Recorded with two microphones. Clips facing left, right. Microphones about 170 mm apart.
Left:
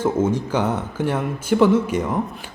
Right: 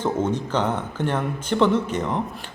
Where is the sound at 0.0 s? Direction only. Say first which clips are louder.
Left 3 dB; 10° left (ahead or behind).